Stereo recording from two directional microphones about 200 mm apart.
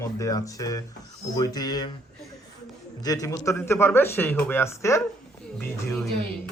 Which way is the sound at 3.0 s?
20° left (ahead or behind).